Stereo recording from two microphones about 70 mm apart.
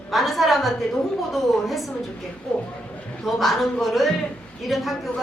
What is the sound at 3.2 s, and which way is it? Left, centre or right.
A woman's voice, centre.